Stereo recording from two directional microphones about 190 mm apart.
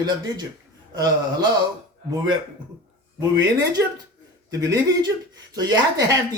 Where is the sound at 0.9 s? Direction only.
20° right (ahead or behind).